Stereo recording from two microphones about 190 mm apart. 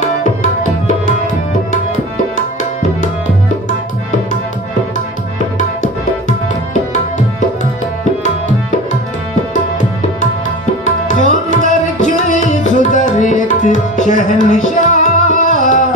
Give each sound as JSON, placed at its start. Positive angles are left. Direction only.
{"t": 5.6, "sound": "tabla", "side_deg": 40}
{"t": 11.1, "sound": "tabla", "side_deg": 40}
{"t": 15.0, "sound": "music", "side_deg": 40}